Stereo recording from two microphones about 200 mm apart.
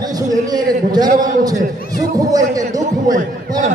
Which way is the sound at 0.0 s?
20° right (ahead or behind).